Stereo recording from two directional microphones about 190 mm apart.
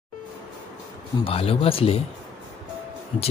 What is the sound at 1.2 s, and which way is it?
Speech, 30° left (ahead or behind).